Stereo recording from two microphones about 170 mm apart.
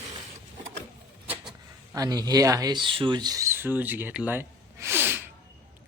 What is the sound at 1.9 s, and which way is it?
Speech, 20° right (ahead or behind).